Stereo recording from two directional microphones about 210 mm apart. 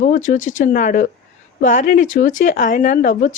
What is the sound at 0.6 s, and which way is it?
Speech, 40° left (ahead or behind).